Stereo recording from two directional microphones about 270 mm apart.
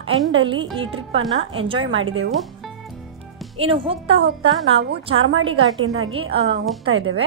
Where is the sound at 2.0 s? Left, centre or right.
Right.